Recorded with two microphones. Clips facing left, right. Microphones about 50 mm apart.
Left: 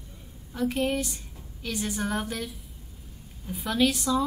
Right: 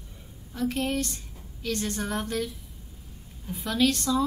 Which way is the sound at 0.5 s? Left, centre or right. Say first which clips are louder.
Left 1 dB; centre.